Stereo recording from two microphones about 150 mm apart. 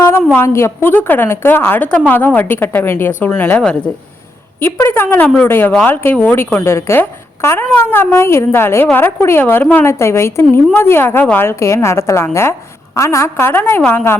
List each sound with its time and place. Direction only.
0.3 s speech: 15° left (ahead or behind)